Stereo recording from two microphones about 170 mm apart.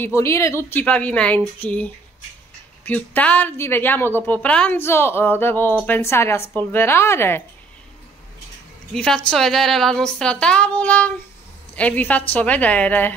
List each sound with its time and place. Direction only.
0.0 s a woman's voice: 15° left (ahead or behind)
8.9 s a woman's voice: 5° left (ahead or behind)